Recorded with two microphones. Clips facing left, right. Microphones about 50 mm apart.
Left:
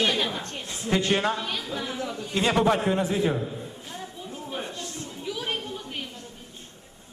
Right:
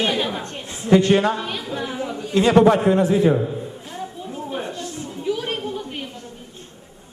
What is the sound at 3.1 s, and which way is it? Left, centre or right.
Speech, right.